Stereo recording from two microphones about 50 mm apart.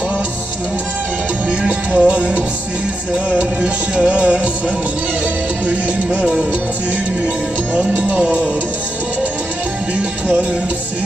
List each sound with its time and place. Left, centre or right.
1.5 s music: right
5.6 s music: right
7.7 s speech: right